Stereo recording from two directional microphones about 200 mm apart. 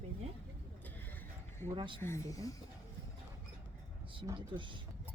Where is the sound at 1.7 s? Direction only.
25° right (ahead or behind).